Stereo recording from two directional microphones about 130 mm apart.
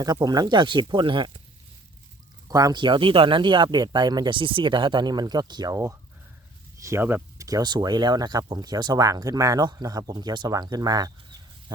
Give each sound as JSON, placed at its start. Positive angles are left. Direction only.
{"t": 0.0, "sound": "speech", "side_deg": -30}
{"t": 2.5, "sound": "speech", "side_deg": -30}
{"t": 7.4, "sound": "speech", "side_deg": -30}